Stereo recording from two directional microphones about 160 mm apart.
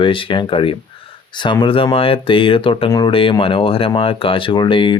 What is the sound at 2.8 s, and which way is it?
Speech, 25° left (ahead or behind).